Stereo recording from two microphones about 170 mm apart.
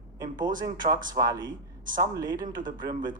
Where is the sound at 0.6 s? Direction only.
25° right (ahead or behind).